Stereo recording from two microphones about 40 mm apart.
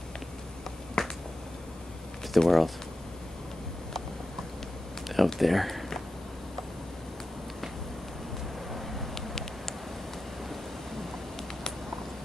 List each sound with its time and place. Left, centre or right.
1.0 s finger snapping: centre
2.3 s speech: centre
5.0 s speech: centre
8.7 s a sound: centre